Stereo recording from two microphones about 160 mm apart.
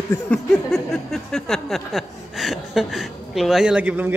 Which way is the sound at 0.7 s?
Centre (ahead or behind).